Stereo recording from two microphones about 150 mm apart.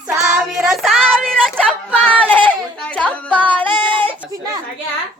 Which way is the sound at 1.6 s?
5° left (ahead or behind).